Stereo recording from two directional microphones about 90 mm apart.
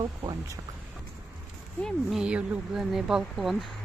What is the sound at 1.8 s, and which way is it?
Speech, 20° left (ahead or behind).